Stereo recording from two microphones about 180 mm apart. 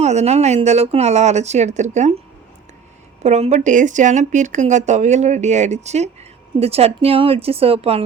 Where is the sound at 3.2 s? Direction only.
40° right (ahead or behind).